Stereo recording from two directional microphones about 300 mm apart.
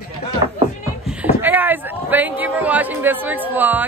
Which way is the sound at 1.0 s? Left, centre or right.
Centre.